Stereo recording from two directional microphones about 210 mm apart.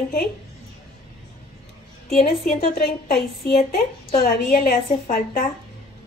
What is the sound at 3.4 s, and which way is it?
A woman's voice, 45° left (ahead or behind).